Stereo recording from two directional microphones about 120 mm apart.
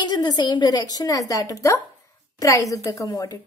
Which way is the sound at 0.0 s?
35° left (ahead or behind).